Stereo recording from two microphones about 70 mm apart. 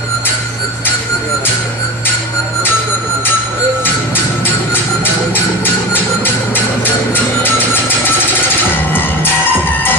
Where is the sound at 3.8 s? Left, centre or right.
Left.